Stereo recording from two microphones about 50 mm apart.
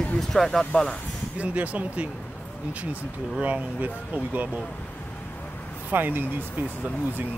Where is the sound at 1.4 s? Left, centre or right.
Right.